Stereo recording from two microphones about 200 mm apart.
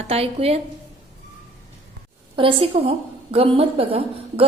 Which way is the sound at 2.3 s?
25° right (ahead or behind).